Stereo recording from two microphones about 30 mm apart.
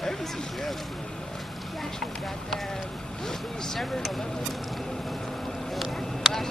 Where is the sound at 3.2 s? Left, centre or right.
Centre.